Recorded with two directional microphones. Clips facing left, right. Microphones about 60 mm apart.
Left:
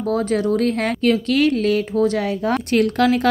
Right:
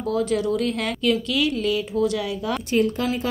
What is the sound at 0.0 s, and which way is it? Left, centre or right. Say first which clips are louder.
Speech: left 3 dB; left.